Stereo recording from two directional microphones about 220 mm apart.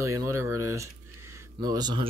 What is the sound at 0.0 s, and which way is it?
Speech, 15° right (ahead or behind).